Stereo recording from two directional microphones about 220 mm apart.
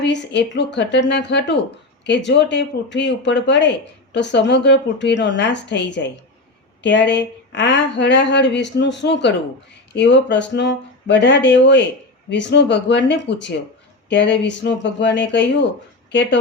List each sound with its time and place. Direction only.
0.0 s speech: 50° left (ahead or behind)